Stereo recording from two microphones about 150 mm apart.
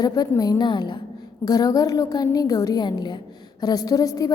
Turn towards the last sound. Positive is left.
turn(degrees=25)  # may be behind; listen again after turning